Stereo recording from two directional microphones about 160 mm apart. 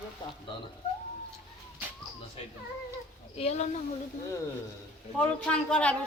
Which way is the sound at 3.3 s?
40° left (ahead or behind).